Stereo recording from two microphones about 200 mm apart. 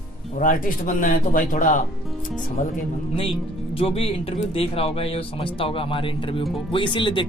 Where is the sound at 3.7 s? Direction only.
30° left (ahead or behind).